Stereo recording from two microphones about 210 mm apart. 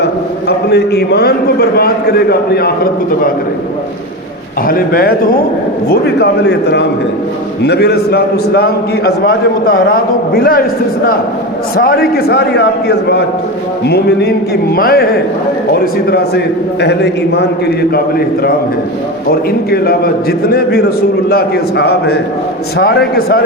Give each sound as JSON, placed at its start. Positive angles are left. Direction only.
{"t": 0.0, "sound": "a man's voice", "side_deg": 50}
{"t": 4.6, "sound": "a man's voice", "side_deg": 45}
{"t": 11.8, "sound": "a man's voice", "side_deg": 45}
{"t": 19.3, "sound": "a man's voice", "side_deg": 45}
{"t": 21.2, "sound": "a man's voice", "side_deg": 50}